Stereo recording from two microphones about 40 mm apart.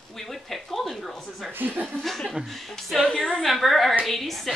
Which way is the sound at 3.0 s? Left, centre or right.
Centre.